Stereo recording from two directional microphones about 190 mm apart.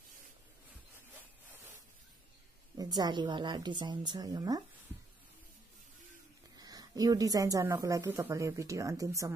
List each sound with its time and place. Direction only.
2.8 s a woman's voice: 20° right (ahead or behind)
6.6 s a woman's voice: 20° right (ahead or behind)